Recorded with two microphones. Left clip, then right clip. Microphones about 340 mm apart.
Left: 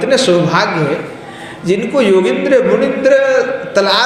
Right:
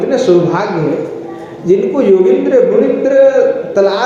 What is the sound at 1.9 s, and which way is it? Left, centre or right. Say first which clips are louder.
A man's voice: even; left.